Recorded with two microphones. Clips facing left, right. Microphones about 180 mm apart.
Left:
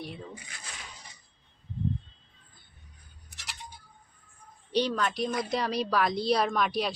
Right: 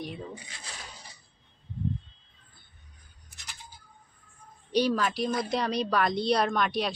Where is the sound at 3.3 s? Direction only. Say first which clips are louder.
Left 3 dB; 90° left.